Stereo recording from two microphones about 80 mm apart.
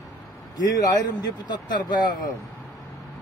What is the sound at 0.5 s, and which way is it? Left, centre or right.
Speech, left.